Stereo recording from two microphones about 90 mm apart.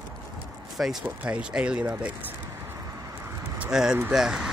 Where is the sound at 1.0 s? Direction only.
15° right (ahead or behind).